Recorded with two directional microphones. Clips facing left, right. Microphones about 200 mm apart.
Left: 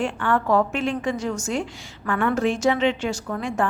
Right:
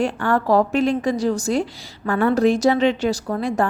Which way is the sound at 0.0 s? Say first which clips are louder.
Right 3 dB; 40° right (ahead or behind).